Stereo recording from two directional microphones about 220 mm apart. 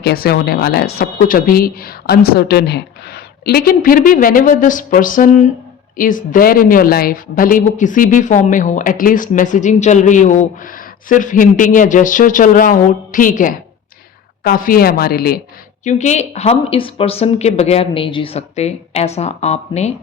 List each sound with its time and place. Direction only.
0.0 s a woman's voice: 45° left (ahead or behind)
15.8 s speech: 35° left (ahead or behind)